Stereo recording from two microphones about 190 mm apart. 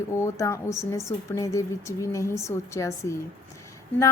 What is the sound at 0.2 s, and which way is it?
A woman's voice, 15° left (ahead or behind).